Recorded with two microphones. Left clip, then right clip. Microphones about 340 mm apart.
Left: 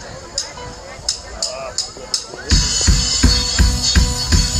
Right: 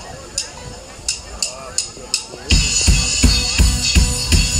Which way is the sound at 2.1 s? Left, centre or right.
Right.